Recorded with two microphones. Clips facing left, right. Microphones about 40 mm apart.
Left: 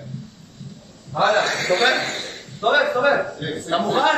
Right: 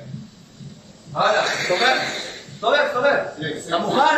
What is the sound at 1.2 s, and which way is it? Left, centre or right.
A man's voice, centre.